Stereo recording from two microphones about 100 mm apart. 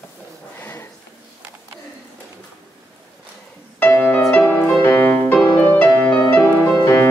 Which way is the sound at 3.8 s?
20° left (ahead or behind).